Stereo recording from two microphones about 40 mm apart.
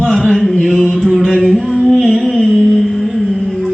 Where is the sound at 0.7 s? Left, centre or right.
Left.